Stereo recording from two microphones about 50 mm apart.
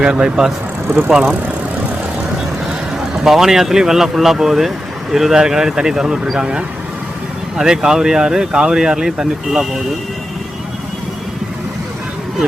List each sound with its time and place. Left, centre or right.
0.0 s speech: centre
0.9 s speech: right
3.2 s speech: centre